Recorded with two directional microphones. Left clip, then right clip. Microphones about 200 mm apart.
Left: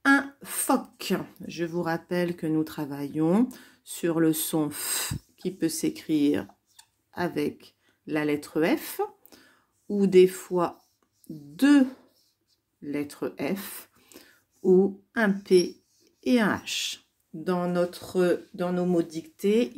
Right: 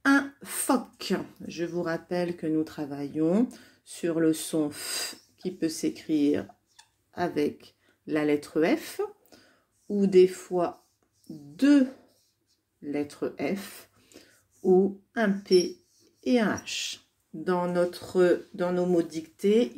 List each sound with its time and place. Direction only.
0.0 s speech: 10° left (ahead or behind)